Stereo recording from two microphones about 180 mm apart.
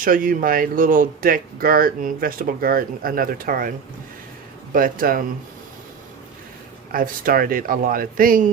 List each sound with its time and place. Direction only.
0.0 s speech: 50° right (ahead or behind)
4.7 s speech: 50° right (ahead or behind)
6.9 s speech: 50° right (ahead or behind)